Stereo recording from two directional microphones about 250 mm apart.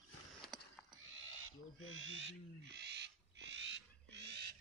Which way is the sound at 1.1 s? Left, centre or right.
Right.